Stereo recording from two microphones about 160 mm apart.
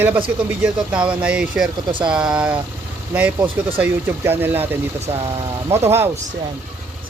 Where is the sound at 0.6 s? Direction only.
5° right (ahead or behind).